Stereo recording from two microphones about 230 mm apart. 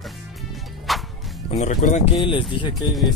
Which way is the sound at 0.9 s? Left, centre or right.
Centre.